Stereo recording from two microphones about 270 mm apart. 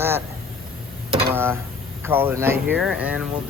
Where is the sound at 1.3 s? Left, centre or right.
Centre.